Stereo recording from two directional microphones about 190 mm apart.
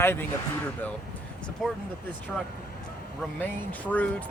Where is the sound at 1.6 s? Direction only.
Centre (ahead or behind).